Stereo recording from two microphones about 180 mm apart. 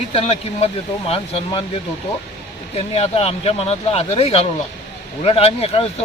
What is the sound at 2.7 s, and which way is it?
Speech, 35° left (ahead or behind).